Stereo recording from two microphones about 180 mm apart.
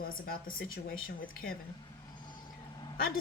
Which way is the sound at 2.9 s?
55° left (ahead or behind).